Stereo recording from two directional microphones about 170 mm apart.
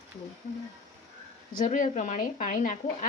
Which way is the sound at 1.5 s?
50° left (ahead or behind).